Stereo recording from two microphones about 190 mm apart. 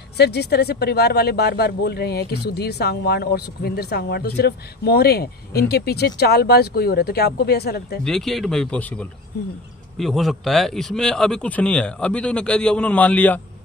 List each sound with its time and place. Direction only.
0.2 s speech: 60° left (ahead or behind)
8.0 s a man's voice: centre (ahead or behind)